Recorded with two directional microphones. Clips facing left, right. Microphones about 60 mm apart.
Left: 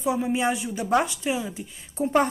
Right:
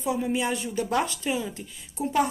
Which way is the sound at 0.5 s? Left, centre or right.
Centre.